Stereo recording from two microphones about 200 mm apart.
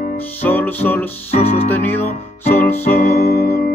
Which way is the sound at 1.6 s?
10° left (ahead or behind).